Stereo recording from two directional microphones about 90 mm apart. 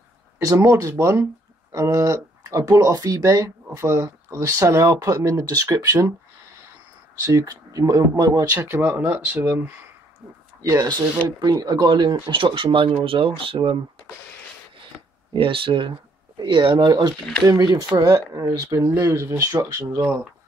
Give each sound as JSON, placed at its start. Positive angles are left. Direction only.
{"t": 0.4, "sound": "speech", "side_deg": -35}
{"t": 7.2, "sound": "speech", "side_deg": -40}
{"t": 8.5, "sound": "speech", "side_deg": -25}
{"t": 10.6, "sound": "speech", "side_deg": -40}
{"t": 15.3, "sound": "speech", "side_deg": -75}
{"t": 16.3, "sound": "speech", "side_deg": -60}
{"t": 17.9, "sound": "speech", "side_deg": -30}